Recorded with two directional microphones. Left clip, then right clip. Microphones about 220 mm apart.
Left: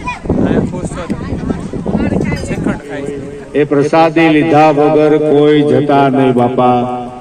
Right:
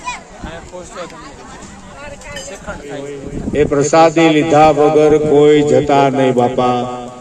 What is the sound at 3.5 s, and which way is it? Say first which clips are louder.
A man's voice: left 1 dB; 30° left (ahead or behind).